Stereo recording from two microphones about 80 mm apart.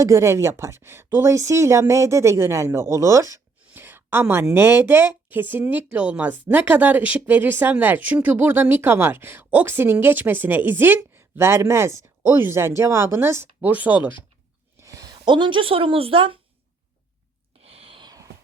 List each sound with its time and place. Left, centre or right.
0.0 s a woman's voice: right
3.8 s a sound: right
4.5 s speech: right
14.8 s speech: right